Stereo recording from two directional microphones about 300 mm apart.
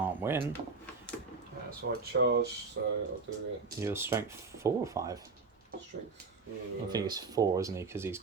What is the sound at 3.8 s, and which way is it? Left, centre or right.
Speech, centre.